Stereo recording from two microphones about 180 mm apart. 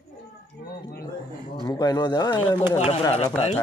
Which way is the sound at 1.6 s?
20° left (ahead or behind).